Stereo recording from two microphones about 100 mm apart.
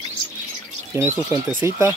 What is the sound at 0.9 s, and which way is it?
Speech, 25° right (ahead or behind).